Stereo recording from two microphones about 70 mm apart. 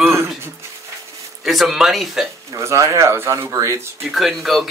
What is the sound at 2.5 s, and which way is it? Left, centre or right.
Speech, right.